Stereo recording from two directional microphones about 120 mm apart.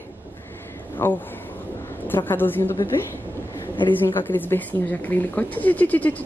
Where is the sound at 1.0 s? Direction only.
20° left (ahead or behind).